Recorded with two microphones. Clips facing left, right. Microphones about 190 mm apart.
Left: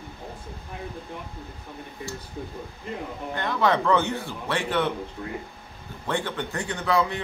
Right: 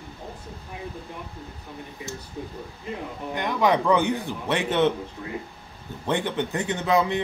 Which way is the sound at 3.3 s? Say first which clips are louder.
Right 2 dB; 15° right (ahead or behind).